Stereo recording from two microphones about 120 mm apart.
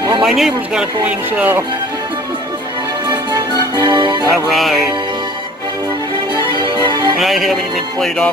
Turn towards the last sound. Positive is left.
turn(degrees=0)  # may be behind; listen again after turning